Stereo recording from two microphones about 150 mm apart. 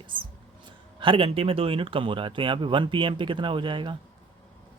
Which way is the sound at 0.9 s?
35° right (ahead or behind).